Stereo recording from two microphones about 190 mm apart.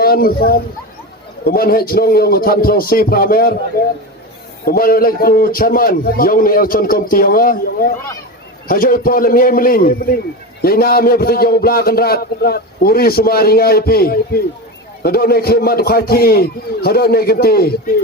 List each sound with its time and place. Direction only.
0.0 s speech: 50° left (ahead or behind)
1.5 s a man's voice: 50° left (ahead or behind)
4.6 s a man's voice: 50° left (ahead or behind)